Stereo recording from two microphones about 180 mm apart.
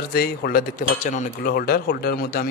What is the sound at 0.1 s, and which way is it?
Speech, 55° left (ahead or behind).